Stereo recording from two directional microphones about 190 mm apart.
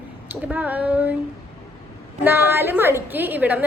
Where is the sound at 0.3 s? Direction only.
10° right (ahead or behind).